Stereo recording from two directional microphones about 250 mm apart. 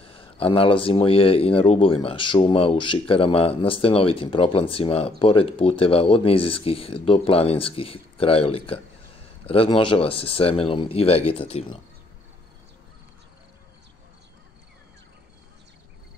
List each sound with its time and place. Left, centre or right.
0.0 s speech: left